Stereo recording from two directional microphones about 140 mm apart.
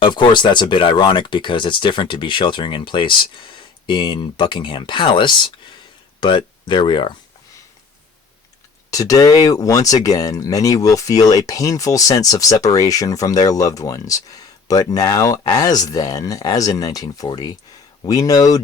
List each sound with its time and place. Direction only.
0.0 s speech: 35° left (ahead or behind)
8.9 s speech: 25° left (ahead or behind)